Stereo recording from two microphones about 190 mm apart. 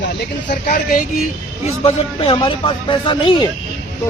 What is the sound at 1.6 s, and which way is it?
Speech, 30° left (ahead or behind).